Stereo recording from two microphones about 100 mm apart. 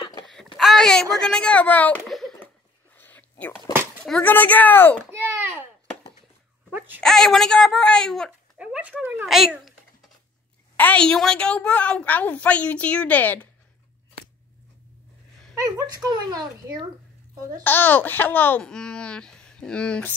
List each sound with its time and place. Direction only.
0.6 s a sound: centre (ahead or behind)
1.2 s a woman's voice: 10° left (ahead or behind)
2.0 s a sound: centre (ahead or behind)
3.0 s whispering: 15° left (ahead or behind)
4.0 s speech: 10° left (ahead or behind)
5.1 s a sound: 25° right (ahead or behind)
7.0 s speech: 5° left (ahead or behind)
8.5 s a sound: 10° right (ahead or behind)
9.2 s speech: 5° right (ahead or behind)
10.8 s a woman's voice: 15° left (ahead or behind)
15.5 s speech: 35° right (ahead or behind)
17.6 s speech: 20° left (ahead or behind)
18.6 s a woman's voice: 5° left (ahead or behind)